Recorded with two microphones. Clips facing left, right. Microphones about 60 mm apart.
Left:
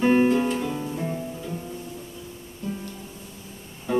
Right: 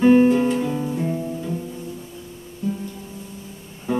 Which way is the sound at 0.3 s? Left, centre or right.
Centre.